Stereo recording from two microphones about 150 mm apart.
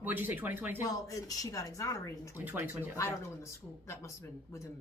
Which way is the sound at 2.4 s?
10° right (ahead or behind).